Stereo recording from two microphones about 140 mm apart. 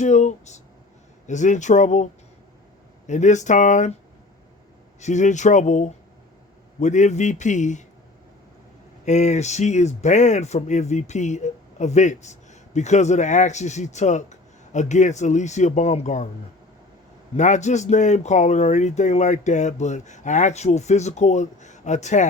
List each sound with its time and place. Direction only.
0.0 s speech: 60° left (ahead or behind)
3.1 s speech: 60° left (ahead or behind)
4.9 s speech: 55° left (ahead or behind)
9.0 s speech: 55° left (ahead or behind)
17.3 s speech: 60° left (ahead or behind)